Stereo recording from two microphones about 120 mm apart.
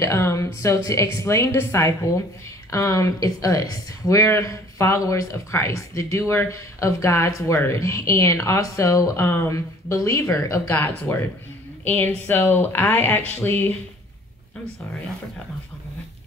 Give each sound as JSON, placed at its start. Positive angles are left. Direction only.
{"t": 0.0, "sound": "speech", "side_deg": 25}
{"t": 10.7, "sound": "speech", "side_deg": 15}